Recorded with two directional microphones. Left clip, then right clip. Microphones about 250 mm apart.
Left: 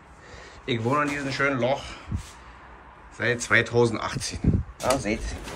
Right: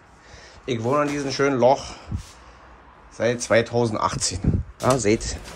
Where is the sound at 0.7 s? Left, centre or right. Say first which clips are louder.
Right 3 dB; centre.